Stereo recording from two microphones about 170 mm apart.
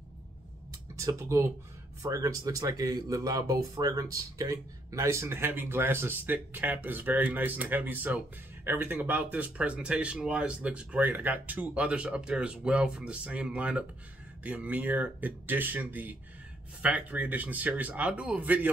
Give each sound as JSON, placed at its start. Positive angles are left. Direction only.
{"t": 0.9, "sound": "speech", "side_deg": -15}